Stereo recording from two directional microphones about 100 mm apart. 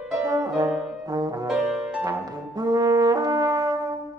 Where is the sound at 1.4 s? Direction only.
5° right (ahead or behind).